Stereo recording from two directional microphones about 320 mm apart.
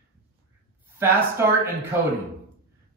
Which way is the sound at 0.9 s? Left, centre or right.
Centre.